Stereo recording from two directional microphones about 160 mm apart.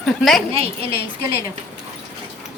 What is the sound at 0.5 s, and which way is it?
Speech, 35° right (ahead or behind).